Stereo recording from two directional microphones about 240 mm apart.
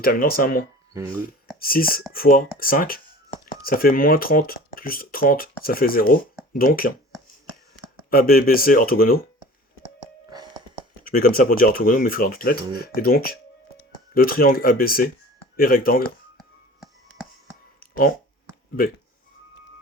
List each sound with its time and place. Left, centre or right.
0.0 s speech: left
8.1 s speech: left
10.2 s music: centre
11.0 s speech: left
17.7 s a sound: left